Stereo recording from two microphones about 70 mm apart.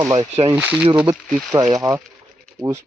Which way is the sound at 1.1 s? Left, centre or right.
Right.